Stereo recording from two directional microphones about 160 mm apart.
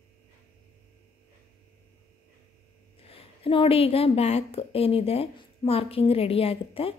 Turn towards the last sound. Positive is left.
turn(degrees=35)  # may be behind; listen again after turning